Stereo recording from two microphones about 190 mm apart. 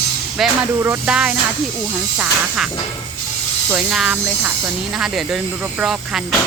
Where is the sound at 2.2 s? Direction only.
5° right (ahead or behind).